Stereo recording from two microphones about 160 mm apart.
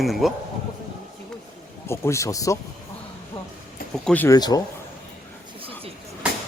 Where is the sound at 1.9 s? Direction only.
20° left (ahead or behind).